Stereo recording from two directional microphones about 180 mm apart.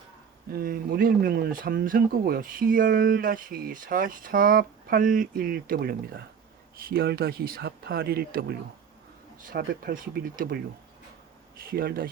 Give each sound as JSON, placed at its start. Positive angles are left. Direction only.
{"t": 0.5, "sound": "speech", "side_deg": -55}
{"t": 11.6, "sound": "speech", "side_deg": -55}